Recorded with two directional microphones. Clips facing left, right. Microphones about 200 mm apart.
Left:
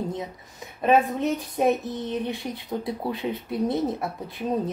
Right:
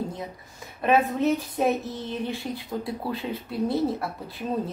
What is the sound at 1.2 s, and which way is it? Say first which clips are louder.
A woman's voice: even; 15° left (ahead or behind).